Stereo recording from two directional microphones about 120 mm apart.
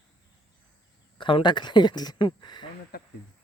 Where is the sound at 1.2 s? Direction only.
45° left (ahead or behind).